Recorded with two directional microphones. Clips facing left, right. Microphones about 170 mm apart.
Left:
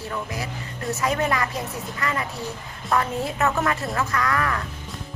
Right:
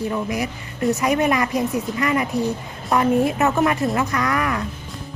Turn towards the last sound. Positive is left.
turn(degrees=-20)  # may be behind; listen again after turning